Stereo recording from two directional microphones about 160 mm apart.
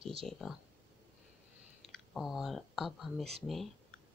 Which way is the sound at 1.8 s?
Centre (ahead or behind).